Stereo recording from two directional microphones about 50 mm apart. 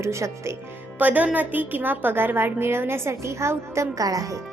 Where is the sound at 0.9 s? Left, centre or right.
Right.